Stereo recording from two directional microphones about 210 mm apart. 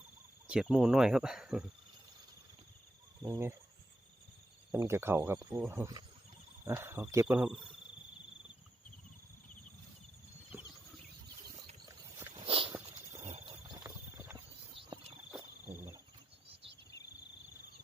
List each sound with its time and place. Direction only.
0.4 s speech: 5° right (ahead or behind)
3.2 s speech: 10° right (ahead or behind)
4.7 s speech: 10° right (ahead or behind)
10.5 s a sound: 10° right (ahead or behind)
11.9 s walk: 20° right (ahead or behind)
12.7 s walk: 10° right (ahead or behind)
13.2 s a sound: 30° right (ahead or behind)
13.8 s horse: 10° right (ahead or behind)
15.7 s wild animals: 10° right (ahead or behind)